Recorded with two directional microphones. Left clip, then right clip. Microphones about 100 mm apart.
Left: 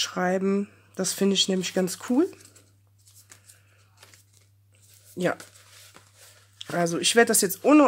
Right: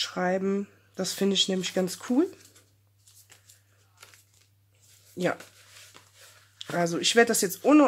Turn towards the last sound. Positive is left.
turn(degrees=25)  # may be behind; listen again after turning